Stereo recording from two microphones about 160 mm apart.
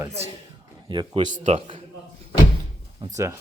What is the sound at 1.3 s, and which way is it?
Speech, 45° right (ahead or behind).